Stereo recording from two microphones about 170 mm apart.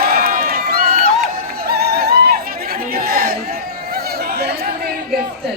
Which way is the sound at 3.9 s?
65° right (ahead or behind).